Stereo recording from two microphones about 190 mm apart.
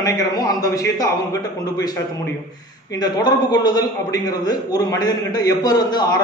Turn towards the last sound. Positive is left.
turn(degrees=20)  # may be behind; listen again after turning